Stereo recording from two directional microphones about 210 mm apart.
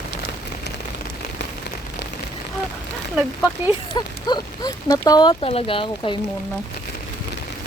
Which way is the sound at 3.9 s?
20° left (ahead or behind).